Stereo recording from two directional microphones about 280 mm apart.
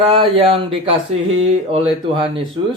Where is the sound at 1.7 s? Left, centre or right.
Centre.